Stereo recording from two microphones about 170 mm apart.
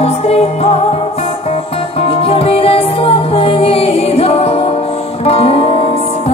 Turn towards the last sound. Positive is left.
turn(degrees=35)  # may be behind; listen again after turning